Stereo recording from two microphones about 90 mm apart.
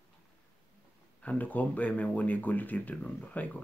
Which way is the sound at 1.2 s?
20° left (ahead or behind).